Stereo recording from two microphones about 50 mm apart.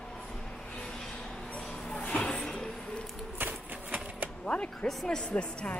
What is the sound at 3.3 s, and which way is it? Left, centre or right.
Typewriter, right.